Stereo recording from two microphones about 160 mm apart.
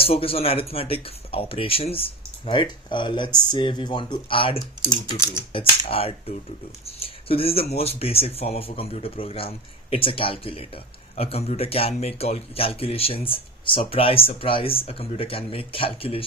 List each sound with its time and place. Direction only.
0.0 s speech: 35° left (ahead or behind)